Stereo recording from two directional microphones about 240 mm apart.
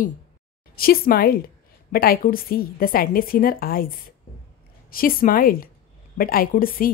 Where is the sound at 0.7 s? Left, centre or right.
Left.